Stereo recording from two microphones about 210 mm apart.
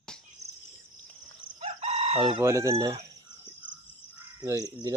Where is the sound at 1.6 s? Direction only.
30° right (ahead or behind).